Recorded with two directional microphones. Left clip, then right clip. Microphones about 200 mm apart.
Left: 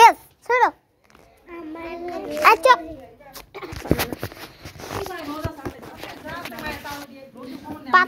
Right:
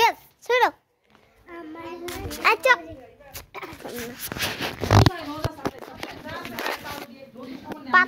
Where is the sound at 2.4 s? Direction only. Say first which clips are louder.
Left 5 dB; 10° left (ahead or behind).